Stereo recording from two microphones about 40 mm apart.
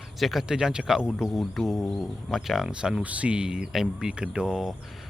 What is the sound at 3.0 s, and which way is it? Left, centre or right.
Speech, right.